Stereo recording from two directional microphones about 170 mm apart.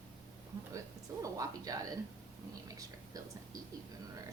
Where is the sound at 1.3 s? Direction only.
20° right (ahead or behind).